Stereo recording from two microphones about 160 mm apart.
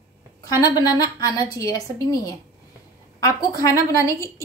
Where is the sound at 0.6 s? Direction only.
25° left (ahead or behind).